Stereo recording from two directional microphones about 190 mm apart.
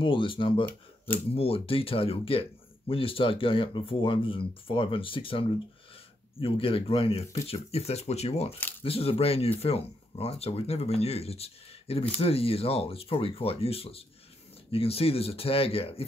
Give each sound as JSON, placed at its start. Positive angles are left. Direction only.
{"t": 0.0, "sound": "speech", "side_deg": 25}